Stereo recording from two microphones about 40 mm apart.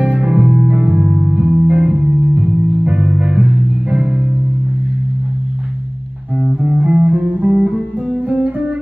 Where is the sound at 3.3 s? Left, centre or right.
Right.